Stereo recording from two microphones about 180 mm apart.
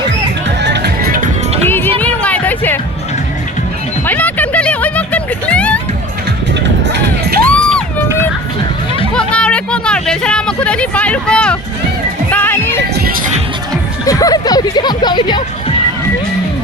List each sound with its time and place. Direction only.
0.6 s music: 70° right (ahead or behind)
1.6 s music: 10° left (ahead or behind)
4.0 s a sound: 10° left (ahead or behind)
6.8 s music: 75° right (ahead or behind)
7.4 s a sound: 5° left (ahead or behind)
9.1 s music: 5° left (ahead or behind)
14.0 s music: 20° left (ahead or behind)